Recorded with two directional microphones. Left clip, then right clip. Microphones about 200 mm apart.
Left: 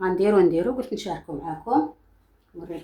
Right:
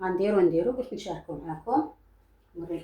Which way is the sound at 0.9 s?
35° left (ahead or behind).